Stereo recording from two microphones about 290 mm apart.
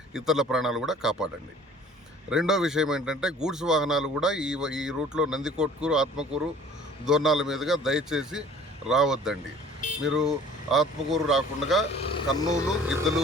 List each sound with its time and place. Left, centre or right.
0.1 s speech: centre
2.3 s speech: centre
11.9 s speech: centre
12.9 s speech: centre